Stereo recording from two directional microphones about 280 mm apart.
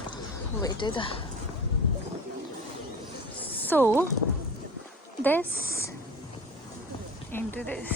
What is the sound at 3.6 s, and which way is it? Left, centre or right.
Speech, centre.